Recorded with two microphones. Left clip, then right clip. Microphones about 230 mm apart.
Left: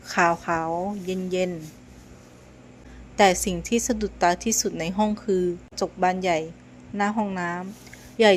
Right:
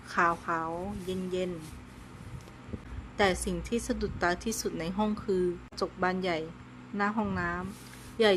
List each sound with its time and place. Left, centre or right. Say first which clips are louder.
0.1 s a woman's voice: left 6 dB; centre
3.2 s a woman's voice: left 9 dB; centre